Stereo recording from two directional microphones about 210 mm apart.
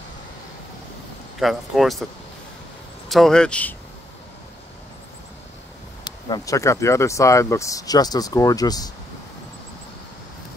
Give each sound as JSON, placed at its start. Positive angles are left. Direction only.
{"t": 1.4, "sound": "speech", "side_deg": 0}
{"t": 3.1, "sound": "speech", "side_deg": 0}
{"t": 6.0, "sound": "speech", "side_deg": 20}